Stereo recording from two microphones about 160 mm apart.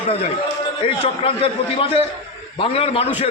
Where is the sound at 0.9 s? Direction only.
35° left (ahead or behind).